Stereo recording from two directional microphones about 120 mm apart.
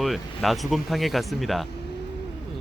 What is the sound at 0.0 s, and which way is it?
Speech, centre (ahead or behind).